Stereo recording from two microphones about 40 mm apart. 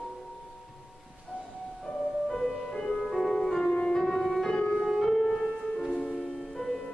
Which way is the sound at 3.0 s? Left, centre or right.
Centre.